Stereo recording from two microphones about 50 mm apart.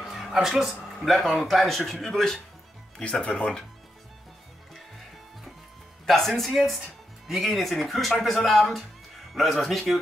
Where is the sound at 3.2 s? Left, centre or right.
Left.